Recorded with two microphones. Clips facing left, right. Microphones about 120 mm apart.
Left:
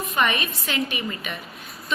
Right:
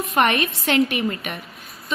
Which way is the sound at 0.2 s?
70° right (ahead or behind).